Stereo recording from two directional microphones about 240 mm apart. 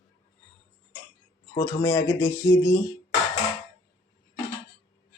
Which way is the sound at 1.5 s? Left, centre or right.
Centre.